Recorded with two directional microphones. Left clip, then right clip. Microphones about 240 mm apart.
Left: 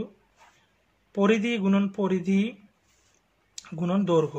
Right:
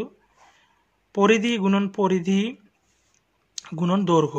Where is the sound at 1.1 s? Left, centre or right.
Right.